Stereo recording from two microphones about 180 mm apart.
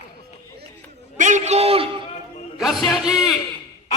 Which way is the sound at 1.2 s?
40° right (ahead or behind).